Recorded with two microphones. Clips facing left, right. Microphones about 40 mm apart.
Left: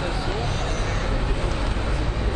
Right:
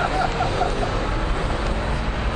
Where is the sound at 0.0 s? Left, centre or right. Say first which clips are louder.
Right 6 dB; right.